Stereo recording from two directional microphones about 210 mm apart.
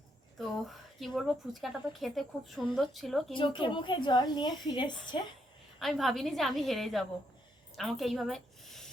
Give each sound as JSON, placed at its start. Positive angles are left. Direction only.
{"t": 0.3, "sound": "speech", "side_deg": 0}
{"t": 3.3, "sound": "a woman's voice", "side_deg": 25}
{"t": 5.8, "sound": "a woman's voice", "side_deg": 0}